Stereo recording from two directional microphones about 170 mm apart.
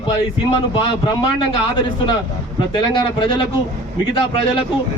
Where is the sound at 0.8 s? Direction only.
30° left (ahead or behind).